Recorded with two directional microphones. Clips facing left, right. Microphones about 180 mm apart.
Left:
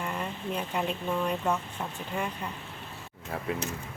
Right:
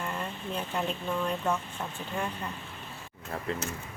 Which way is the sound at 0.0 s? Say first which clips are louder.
Left 2 dB; 10° left (ahead or behind).